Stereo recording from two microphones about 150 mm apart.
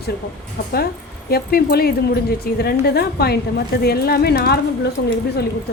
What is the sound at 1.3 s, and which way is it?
A woman's voice, 90° left.